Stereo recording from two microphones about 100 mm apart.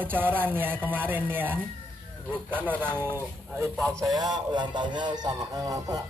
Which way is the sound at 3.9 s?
35° right (ahead or behind).